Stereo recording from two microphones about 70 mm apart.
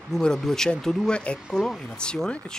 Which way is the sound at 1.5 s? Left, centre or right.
Centre.